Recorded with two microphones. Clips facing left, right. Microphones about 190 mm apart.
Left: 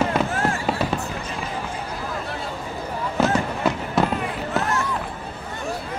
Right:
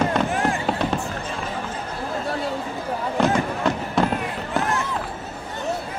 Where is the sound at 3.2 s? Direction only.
5° left (ahead or behind).